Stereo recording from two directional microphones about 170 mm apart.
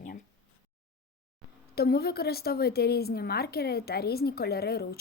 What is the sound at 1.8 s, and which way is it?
A woman's voice, 65° left (ahead or behind).